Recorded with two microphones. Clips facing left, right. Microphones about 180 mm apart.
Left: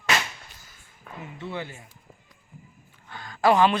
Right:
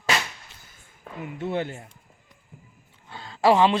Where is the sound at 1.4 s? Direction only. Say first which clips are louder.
Right 7 dB; 50° right (ahead or behind).